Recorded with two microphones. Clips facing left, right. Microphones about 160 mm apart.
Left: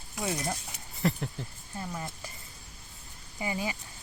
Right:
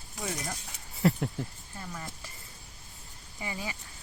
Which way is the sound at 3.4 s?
20° left (ahead or behind).